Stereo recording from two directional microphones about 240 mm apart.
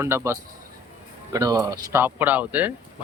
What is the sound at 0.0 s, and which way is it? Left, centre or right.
Speech, centre.